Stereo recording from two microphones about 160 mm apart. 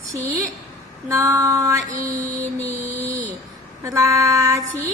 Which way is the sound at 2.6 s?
20° right (ahead or behind).